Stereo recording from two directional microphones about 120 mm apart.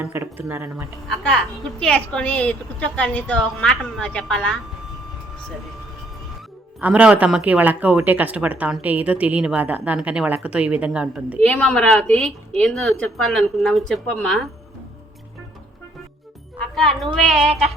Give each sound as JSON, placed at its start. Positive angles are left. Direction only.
{"t": 0.0, "sound": "a woman's voice", "side_deg": -15}
{"t": 1.0, "sound": "a woman's voice", "side_deg": 5}
{"t": 6.7, "sound": "a woman's voice", "side_deg": -10}
{"t": 11.3, "sound": "a woman's voice", "side_deg": 10}
{"t": 16.7, "sound": "a woman's voice", "side_deg": 5}